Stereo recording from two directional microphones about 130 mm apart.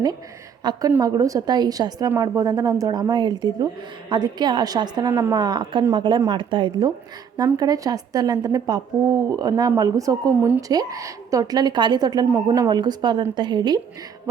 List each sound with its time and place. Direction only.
0.6 s a woman's voice: 35° right (ahead or behind)
0.9 s speech: 20° right (ahead or behind)
5.0 s speech: 20° right (ahead or behind)
5.4 s speech: 35° right (ahead or behind)